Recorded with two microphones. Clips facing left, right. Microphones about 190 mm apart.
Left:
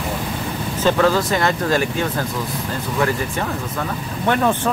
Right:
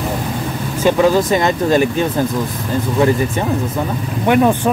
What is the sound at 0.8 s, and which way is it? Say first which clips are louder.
Speech: right 4 dB; 15° right (ahead or behind).